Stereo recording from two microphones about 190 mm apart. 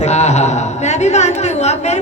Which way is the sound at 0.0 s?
35° left (ahead or behind).